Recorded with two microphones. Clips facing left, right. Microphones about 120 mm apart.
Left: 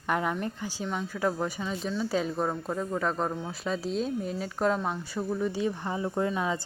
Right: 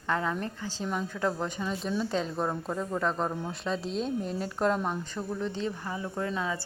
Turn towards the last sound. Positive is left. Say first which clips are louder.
# left 4 dB
turn(degrees=25)  # may be behind; listen again after turning